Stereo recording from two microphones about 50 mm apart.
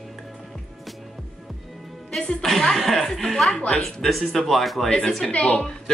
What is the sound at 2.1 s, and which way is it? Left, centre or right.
A woman's voice, centre.